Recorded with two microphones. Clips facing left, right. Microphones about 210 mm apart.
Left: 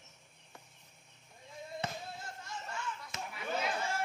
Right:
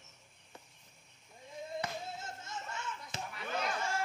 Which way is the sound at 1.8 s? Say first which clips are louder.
Left 4 dB; 25° left (ahead or behind).